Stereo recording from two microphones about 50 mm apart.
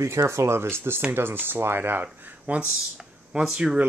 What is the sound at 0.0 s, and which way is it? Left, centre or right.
Speech, right.